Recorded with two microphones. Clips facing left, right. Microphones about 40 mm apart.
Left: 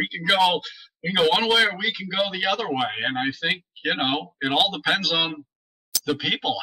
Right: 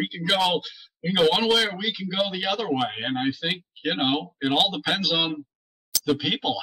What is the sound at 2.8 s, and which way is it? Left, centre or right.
Speech, centre.